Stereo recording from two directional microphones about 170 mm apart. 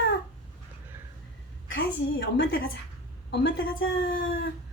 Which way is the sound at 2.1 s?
90° left.